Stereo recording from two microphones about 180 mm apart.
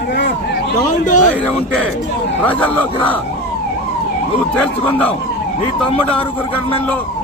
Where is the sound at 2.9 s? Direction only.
30° left (ahead or behind).